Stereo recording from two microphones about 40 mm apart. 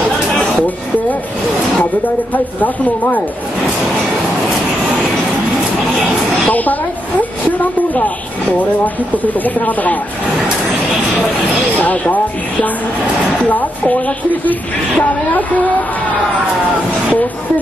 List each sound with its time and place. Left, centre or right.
2.3 s speech: left
6.4 s snake: left
7.9 s speech: left
11.8 s speech: left
13.5 s speech: left